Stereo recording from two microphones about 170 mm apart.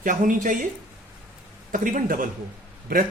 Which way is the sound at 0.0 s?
50° right (ahead or behind).